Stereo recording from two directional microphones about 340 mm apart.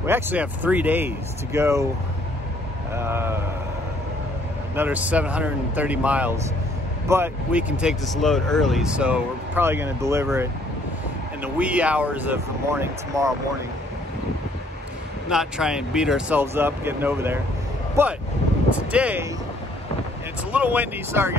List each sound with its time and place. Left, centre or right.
0.0 s speech: centre
2.9 s speech: centre
4.7 s speech: centre
15.2 s speech: centre
20.5 s speech: centre